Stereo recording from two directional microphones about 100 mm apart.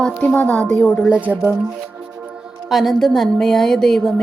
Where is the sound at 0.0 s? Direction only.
10° left (ahead or behind).